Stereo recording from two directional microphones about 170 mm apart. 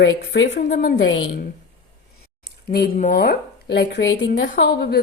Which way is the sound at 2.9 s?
55° left (ahead or behind).